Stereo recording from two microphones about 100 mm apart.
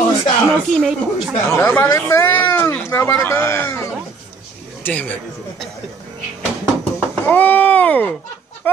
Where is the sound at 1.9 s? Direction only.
25° left (ahead or behind).